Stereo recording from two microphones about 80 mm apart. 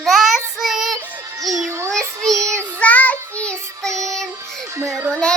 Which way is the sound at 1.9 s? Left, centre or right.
Centre.